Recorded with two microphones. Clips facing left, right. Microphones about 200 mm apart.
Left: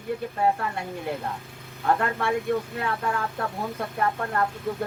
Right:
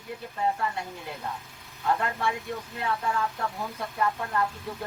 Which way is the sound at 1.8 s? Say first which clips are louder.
Left 3 dB; 50° left (ahead or behind).